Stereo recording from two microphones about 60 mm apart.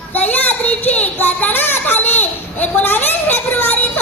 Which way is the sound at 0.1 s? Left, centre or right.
Left.